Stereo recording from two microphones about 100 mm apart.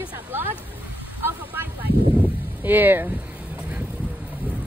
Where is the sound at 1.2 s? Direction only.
20° right (ahead or behind).